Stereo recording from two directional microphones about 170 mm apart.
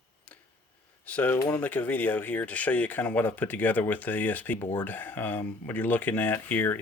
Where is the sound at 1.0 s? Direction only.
10° left (ahead or behind).